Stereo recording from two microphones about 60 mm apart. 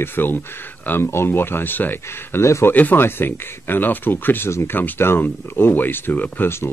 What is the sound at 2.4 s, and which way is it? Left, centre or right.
Speech, left.